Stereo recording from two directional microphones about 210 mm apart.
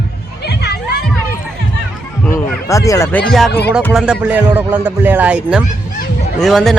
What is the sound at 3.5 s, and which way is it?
Music, 50° left (ahead or behind).